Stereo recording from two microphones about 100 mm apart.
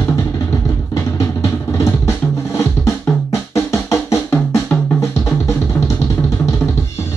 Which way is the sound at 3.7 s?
30° left (ahead or behind).